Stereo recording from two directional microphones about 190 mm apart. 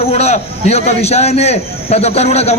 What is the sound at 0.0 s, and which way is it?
A man's voice, 35° left (ahead or behind).